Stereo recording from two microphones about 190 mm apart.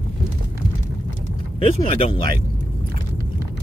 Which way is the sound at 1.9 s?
30° left (ahead or behind).